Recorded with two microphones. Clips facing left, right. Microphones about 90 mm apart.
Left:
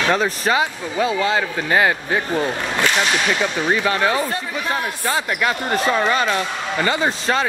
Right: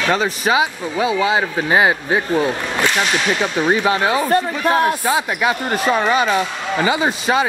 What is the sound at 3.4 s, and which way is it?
Speech, 25° right (ahead or behind).